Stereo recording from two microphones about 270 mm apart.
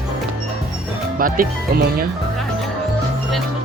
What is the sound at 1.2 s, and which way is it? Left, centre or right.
Speech, right.